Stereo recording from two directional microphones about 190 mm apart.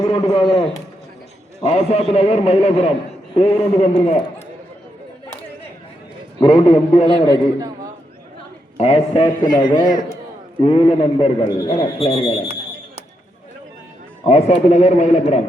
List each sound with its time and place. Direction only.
0.1 s a man's voice: 25° left (ahead or behind)
1.6 s a man's voice: 35° left (ahead or behind)
6.4 s a man's voice: 30° left (ahead or behind)
8.8 s a man's voice: 30° left (ahead or behind)
14.3 s a man's voice: 35° left (ahead or behind)